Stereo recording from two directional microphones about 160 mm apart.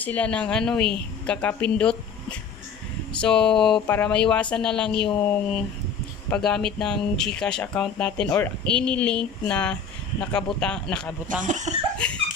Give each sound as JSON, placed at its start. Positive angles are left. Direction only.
{"t": 0.0, "sound": "a woman's voice", "side_deg": 10}
{"t": 3.1, "sound": "a woman's voice", "side_deg": 5}
{"t": 11.2, "sound": "speech", "side_deg": -50}